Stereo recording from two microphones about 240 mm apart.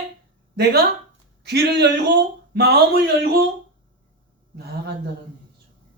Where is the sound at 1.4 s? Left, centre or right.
Right.